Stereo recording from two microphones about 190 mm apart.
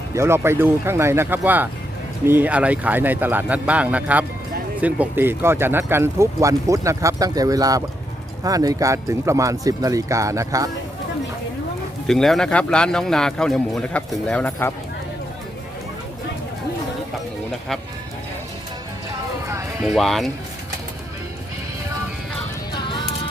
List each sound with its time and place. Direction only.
0.1 s speech: 15° right (ahead or behind)
12.0 s speech: centre (ahead or behind)
19.8 s speech: centre (ahead or behind)
22.7 s music: 25° left (ahead or behind)